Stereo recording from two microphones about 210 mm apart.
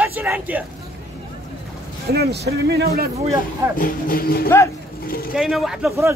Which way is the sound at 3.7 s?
40° left (ahead or behind).